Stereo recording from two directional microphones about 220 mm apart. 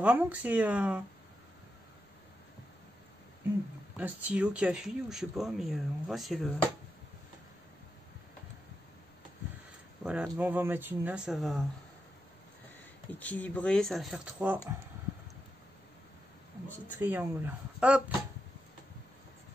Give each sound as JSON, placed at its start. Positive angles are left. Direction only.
{"t": 0.0, "sound": "speech", "side_deg": -5}
{"t": 3.9, "sound": "speech", "side_deg": -5}
{"t": 10.0, "sound": "speech", "side_deg": -5}
{"t": 13.2, "sound": "speech", "side_deg": 5}
{"t": 17.0, "sound": "speech", "side_deg": -10}